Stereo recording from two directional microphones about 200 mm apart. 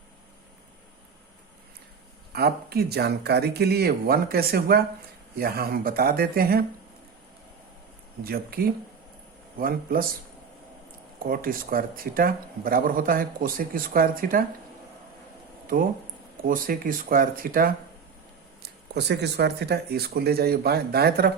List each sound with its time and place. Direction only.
2.3 s speech: 50° right (ahead or behind)
8.2 s speech: 50° right (ahead or behind)
11.2 s speech: 45° right (ahead or behind)
15.7 s speech: 45° right (ahead or behind)
18.6 s speech: 55° right (ahead or behind)